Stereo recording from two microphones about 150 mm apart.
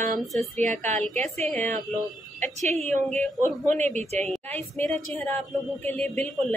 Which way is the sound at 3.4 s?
50° right (ahead or behind).